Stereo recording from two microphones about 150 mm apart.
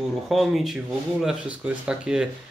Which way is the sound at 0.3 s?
Centre (ahead or behind).